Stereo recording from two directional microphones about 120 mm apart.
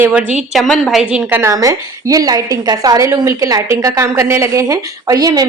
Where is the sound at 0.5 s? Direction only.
Centre (ahead or behind).